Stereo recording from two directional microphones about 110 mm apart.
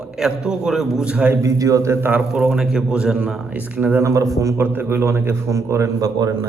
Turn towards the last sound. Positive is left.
turn(degrees=-35)  # may be behind; listen again after turning